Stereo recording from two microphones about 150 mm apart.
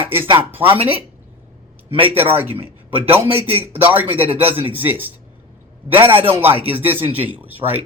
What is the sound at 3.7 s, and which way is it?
Speech, 10° right (ahead or behind).